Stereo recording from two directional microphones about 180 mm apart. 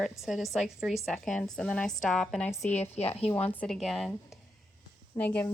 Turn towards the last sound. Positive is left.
turn(degrees=10)  # may be behind; listen again after turning